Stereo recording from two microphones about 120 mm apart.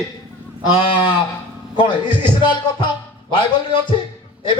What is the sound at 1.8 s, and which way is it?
A man's voice, 40° left (ahead or behind).